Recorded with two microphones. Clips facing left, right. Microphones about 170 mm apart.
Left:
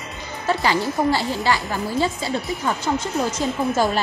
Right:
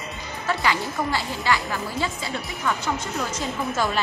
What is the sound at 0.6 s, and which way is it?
Speech, 35° left (ahead or behind).